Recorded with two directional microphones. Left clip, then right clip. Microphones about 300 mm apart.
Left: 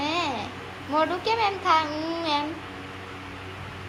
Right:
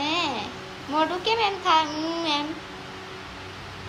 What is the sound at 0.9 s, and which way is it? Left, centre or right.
Speech, centre.